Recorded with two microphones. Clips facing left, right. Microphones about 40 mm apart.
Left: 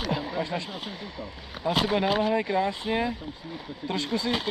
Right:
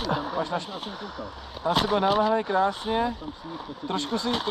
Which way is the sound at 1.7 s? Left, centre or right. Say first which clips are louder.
Right 2 dB; left.